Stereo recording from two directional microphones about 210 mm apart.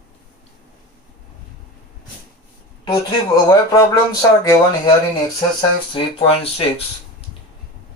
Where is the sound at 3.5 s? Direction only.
15° left (ahead or behind).